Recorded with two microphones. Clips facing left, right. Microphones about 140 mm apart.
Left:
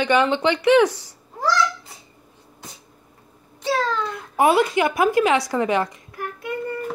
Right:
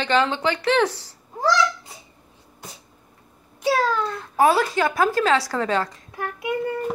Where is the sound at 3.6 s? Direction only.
10° right (ahead or behind).